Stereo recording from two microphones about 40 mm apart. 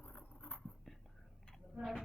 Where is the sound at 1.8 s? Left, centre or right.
Centre.